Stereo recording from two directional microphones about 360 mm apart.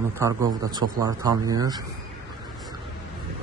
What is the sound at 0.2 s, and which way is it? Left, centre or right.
A man's voice, centre.